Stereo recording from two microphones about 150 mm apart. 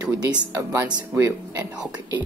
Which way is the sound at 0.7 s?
15° right (ahead or behind).